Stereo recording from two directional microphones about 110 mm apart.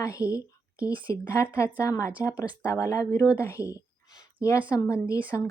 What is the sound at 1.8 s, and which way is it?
Speech, 30° left (ahead or behind).